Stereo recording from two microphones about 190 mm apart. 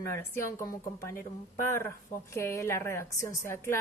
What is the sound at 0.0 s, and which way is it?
Speech, 15° left (ahead or behind).